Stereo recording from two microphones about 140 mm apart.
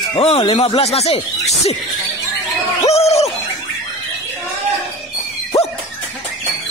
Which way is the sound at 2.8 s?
50° left (ahead or behind).